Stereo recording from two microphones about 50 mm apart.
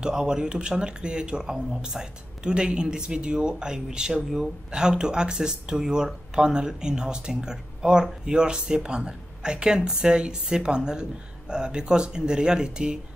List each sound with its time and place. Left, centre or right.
0.0 s speech: centre